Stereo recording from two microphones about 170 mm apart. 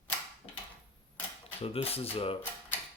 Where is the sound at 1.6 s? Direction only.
35° left (ahead or behind).